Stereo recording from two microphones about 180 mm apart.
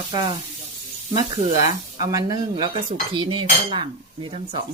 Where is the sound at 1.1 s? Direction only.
20° right (ahead or behind).